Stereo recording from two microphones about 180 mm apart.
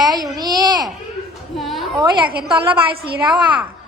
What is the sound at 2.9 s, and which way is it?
Speech, 60° right (ahead or behind).